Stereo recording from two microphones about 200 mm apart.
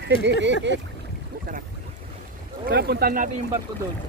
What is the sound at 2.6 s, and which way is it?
Speech, 55° right (ahead or behind).